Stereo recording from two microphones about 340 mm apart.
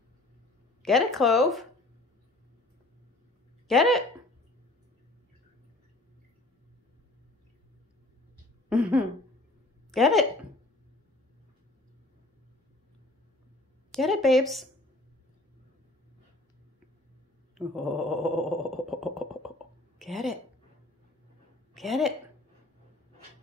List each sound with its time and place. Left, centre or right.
0.8 s speech: centre
3.6 s speech: centre
8.6 s a woman's voice: centre
13.9 s speech: centre
17.6 s a sound: centre
20.0 s a woman's voice: centre
21.7 s speech: centre